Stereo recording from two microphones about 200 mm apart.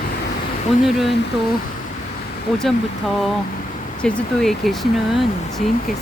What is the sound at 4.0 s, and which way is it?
Speech, 5° left (ahead or behind).